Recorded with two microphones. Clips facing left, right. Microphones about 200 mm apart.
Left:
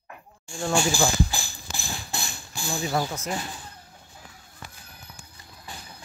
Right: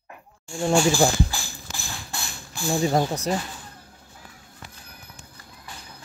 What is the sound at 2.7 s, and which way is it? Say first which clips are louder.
Speech: right 6 dB; 35° right (ahead or behind).